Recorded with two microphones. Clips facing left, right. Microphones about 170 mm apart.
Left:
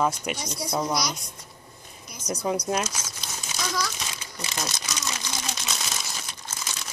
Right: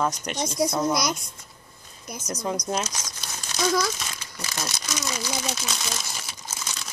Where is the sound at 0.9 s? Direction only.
50° right (ahead or behind).